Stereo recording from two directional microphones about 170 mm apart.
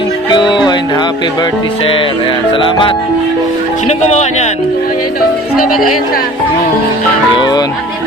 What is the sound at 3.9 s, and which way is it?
Speech, 40° left (ahead or behind).